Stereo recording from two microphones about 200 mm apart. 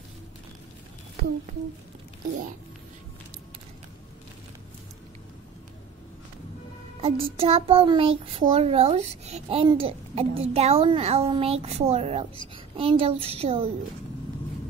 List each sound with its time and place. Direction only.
7.0 s a child's voice: 30° right (ahead or behind)